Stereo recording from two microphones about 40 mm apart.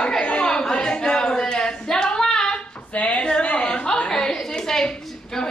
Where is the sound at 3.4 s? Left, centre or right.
Left.